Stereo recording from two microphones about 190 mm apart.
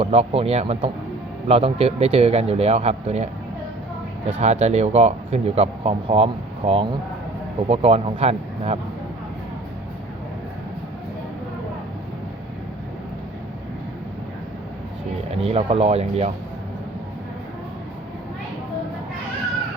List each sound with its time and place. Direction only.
0.0 s speech: 30° right (ahead or behind)
4.3 s speech: 35° right (ahead or behind)
15.4 s speech: 30° right (ahead or behind)